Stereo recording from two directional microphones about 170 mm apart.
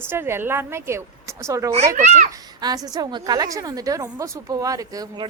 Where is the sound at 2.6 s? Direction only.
25° right (ahead or behind).